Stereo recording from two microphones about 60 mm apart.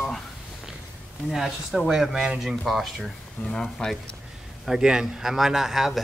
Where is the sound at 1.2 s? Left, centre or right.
Centre.